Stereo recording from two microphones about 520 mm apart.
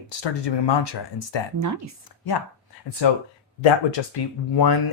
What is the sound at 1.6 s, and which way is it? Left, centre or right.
Speech, right.